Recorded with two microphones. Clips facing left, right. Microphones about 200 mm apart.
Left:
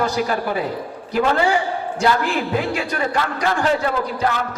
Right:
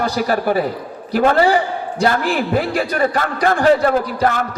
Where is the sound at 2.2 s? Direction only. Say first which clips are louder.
Right 3 dB; 35° right (ahead or behind).